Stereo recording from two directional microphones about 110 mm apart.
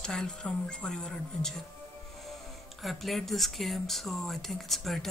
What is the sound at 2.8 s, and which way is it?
Speech, centre (ahead or behind).